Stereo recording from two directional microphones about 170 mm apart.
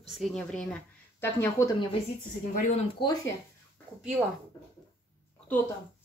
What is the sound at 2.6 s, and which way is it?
Speech, 45° left (ahead or behind).